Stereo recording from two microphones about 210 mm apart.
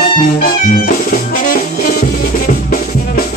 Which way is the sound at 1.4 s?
40° left (ahead or behind).